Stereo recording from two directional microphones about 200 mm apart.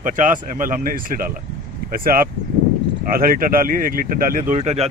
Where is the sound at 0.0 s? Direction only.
40° right (ahead or behind).